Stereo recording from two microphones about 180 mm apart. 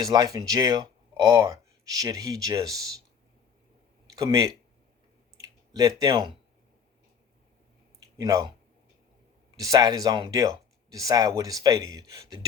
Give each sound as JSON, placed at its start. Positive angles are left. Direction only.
{"t": 0.0, "sound": "speech", "side_deg": -20}
{"t": 4.1, "sound": "speech", "side_deg": -20}
{"t": 5.4, "sound": "a sound", "side_deg": -20}
{"t": 8.2, "sound": "speech", "side_deg": -20}
{"t": 9.6, "sound": "speech", "side_deg": -20}